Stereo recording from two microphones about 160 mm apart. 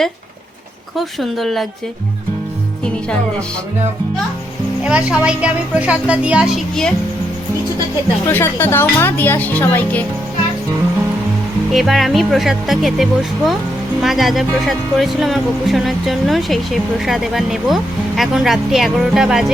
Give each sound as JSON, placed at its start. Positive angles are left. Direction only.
{"t": 0.9, "sound": "speech", "side_deg": 0}
{"t": 4.8, "sound": "a woman's voice", "side_deg": -5}
{"t": 8.3, "sound": "speech", "side_deg": 15}
{"t": 11.7, "sound": "speech", "side_deg": 0}